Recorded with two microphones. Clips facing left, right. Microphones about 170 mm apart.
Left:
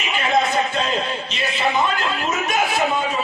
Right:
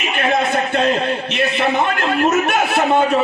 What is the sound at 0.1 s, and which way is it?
A man's voice, 60° right (ahead or behind).